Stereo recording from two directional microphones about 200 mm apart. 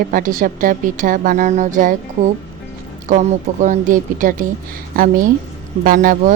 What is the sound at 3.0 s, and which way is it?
A woman's voice, 40° right (ahead or behind).